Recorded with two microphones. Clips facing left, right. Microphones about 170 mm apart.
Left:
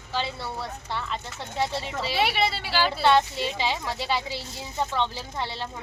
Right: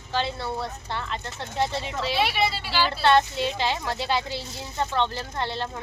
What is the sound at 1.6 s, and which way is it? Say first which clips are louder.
A woman's voice: right 1 dB; 10° left (ahead or behind).